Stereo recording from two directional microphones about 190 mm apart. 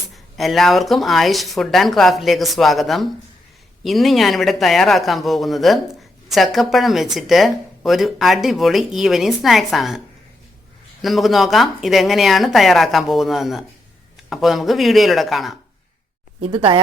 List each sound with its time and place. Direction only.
0.3 s speech: centre (ahead or behind)
11.0 s speech: centre (ahead or behind)
16.4 s speech: 30° right (ahead or behind)